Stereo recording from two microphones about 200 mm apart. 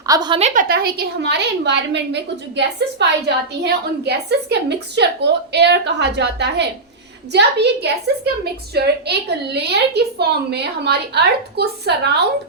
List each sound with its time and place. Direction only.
0.0 s a woman's voice: 20° right (ahead or behind); by 12.1 s 55° right (ahead or behind)